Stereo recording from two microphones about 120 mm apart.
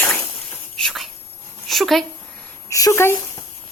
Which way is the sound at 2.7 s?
25° left (ahead or behind).